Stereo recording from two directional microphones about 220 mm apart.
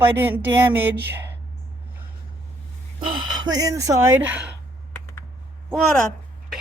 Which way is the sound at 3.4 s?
15° right (ahead or behind).